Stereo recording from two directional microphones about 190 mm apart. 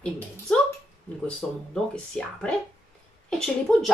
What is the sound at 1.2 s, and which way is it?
A woman's voice, 5° left (ahead or behind).